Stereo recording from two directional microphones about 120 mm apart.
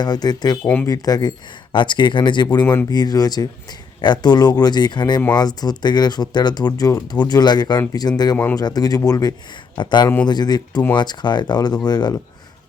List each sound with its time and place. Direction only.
0.0 s speech: 35° left (ahead or behind)
0.6 s speech: 15° left (ahead or behind)
0.9 s speech: 30° left (ahead or behind)